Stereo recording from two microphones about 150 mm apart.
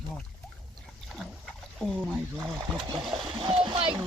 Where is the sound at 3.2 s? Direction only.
35° right (ahead or behind).